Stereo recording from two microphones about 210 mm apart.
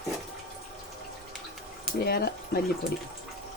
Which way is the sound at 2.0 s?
50° left (ahead or behind).